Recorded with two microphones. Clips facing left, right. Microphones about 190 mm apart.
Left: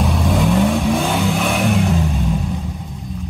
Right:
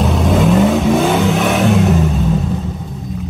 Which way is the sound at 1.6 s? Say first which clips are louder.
Right 5 dB; 70° right (ahead or behind).